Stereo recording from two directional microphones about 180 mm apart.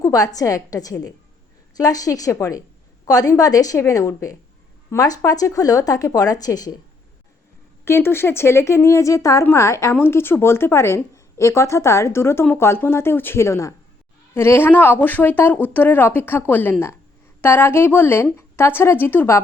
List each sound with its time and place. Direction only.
0.0 s speech: 20° left (ahead or behind)
7.9 s a woman's voice: 15° left (ahead or behind)